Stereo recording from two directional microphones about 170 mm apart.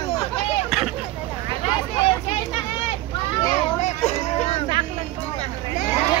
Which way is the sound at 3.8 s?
40° left (ahead or behind).